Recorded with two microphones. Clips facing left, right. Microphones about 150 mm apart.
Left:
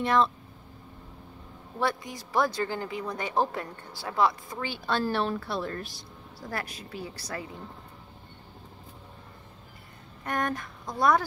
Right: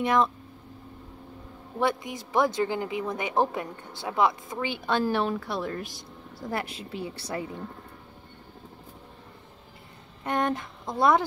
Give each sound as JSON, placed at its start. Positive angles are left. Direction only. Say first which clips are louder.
{"t": 0.0, "sound": "speech", "louder": "right 1 dB", "side_deg": -15}
{"t": 1.8, "sound": "speech", "louder": "right 3 dB", "side_deg": -20}
{"t": 6.5, "sound": "speech", "louder": "right 3 dB", "side_deg": -25}
{"t": 10.2, "sound": "speech", "louder": "right 3 dB", "side_deg": -25}